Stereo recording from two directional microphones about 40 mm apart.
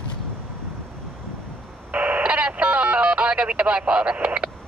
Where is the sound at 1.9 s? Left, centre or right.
Right.